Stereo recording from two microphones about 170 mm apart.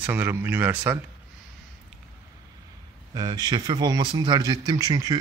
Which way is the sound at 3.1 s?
25° right (ahead or behind).